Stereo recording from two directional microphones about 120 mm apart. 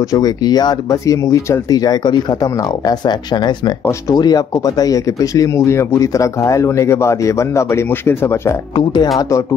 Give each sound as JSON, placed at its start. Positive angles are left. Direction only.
{"t": 0.1, "sound": "speech", "side_deg": 35}
{"t": 8.7, "sound": "speech", "side_deg": 35}